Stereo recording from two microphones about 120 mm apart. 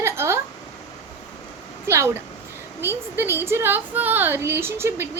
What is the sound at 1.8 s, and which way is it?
A woman's voice, 20° right (ahead or behind).